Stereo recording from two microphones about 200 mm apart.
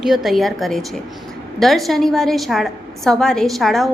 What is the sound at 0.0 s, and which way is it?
A woman's voice, centre (ahead or behind).